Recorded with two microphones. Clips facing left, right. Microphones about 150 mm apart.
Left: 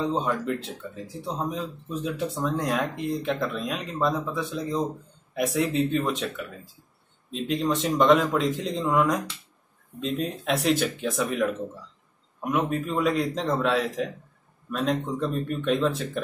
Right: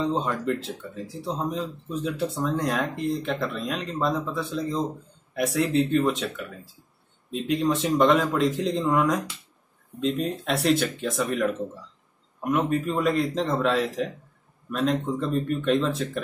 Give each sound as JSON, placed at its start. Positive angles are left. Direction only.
{"t": 0.0, "sound": "speech", "side_deg": 0}